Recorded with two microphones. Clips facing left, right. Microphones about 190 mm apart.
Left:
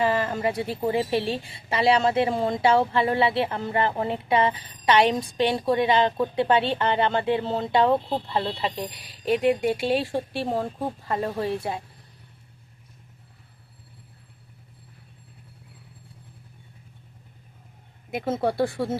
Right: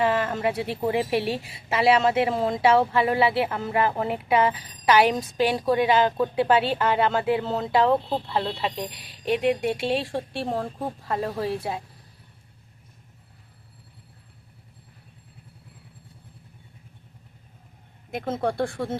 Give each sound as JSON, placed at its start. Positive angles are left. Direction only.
{"t": 0.0, "sound": "speech", "side_deg": 0}
{"t": 1.2, "sound": "a woman's voice", "side_deg": 30}
{"t": 1.5, "sound": "speech", "side_deg": -5}
{"t": 18.1, "sound": "speech", "side_deg": 5}